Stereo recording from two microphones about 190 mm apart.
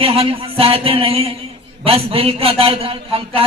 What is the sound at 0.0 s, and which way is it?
A man's voice, 30° right (ahead or behind).